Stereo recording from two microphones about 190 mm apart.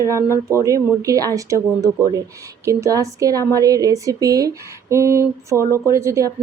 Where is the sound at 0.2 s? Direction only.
15° left (ahead or behind).